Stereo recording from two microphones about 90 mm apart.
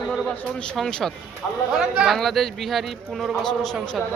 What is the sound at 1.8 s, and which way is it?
Speech, 10° right (ahead or behind).